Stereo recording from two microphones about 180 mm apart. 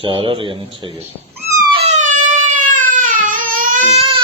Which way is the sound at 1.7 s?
40° right (ahead or behind).